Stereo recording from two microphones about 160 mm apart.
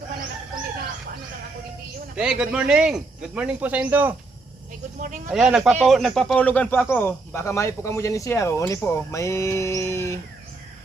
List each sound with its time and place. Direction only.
2.1 s speech: 5° right (ahead or behind)
5.3 s speech: 5° right (ahead or behind); by 10.2 s 15° left (ahead or behind)